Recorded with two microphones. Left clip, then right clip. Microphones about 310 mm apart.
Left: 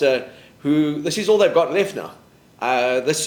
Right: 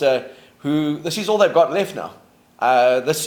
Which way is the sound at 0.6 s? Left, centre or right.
Right.